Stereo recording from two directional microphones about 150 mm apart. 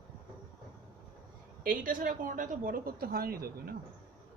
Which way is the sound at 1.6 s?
70° right (ahead or behind).